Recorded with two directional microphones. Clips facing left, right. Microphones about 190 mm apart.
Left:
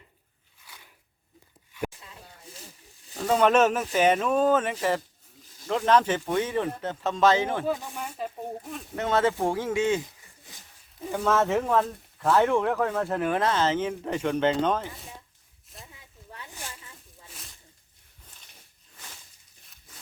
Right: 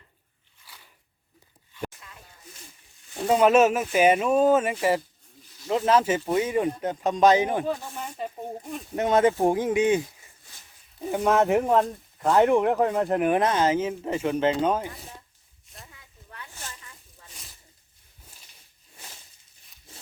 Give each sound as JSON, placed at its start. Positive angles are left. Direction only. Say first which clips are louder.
{"t": 2.0, "sound": "a sound", "louder": "left 2 dB", "side_deg": 30}
{"t": 3.2, "sound": "speech", "louder": "right 2 dB", "side_deg": -10}
{"t": 8.0, "sound": "speech", "louder": "right 2 dB", "side_deg": 5}
{"t": 9.0, "sound": "speech", "louder": "right 4 dB", "side_deg": -15}
{"t": 11.1, "sound": "speech", "louder": "right 3 dB", "side_deg": -15}
{"t": 15.7, "sound": "a sound", "louder": "left 1 dB", "side_deg": 0}
{"t": 16.6, "sound": "snake", "louder": "left 1 dB", "side_deg": 15}
{"t": 17.2, "sound": "snake", "louder": "left 1 dB", "side_deg": 0}